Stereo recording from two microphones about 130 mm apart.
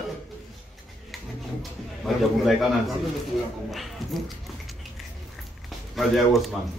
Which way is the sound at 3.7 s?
Centre (ahead or behind).